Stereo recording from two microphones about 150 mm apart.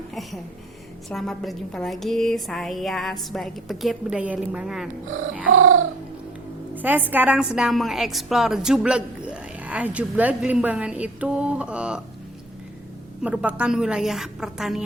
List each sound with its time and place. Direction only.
0.1 s a woman's voice: centre (ahead or behind)
6.7 s a woman's voice: 10° right (ahead or behind)
13.2 s a woman's voice: 10° right (ahead or behind)